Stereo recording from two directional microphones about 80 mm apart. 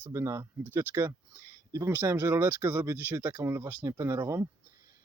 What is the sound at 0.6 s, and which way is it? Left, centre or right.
Speech, right.